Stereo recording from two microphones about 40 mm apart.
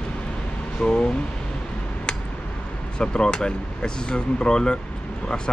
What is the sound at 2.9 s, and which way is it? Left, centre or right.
Speech, left.